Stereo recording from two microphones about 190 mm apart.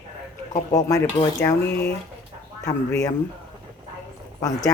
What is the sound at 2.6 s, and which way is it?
Speech, 15° left (ahead or behind).